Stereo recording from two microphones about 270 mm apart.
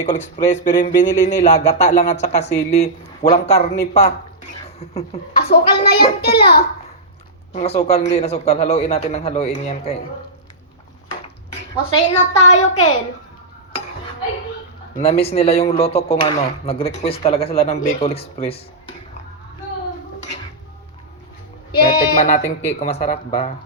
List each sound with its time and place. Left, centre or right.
0.0 s speech: left
5.5 s a child's voice: left
7.5 s speech: left
12.4 s speech: left
14.9 s speech: left
21.8 s speech: left